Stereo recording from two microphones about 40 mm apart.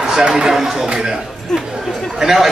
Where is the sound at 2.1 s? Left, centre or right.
Centre.